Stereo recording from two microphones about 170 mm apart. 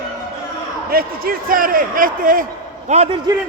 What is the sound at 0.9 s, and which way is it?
A man's voice, 60° right (ahead or behind).